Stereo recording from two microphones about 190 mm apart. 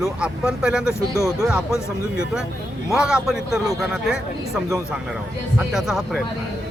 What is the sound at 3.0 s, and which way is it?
Speech, 5° right (ahead or behind).